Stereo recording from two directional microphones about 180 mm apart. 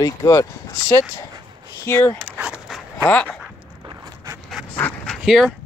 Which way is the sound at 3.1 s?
10° left (ahead or behind).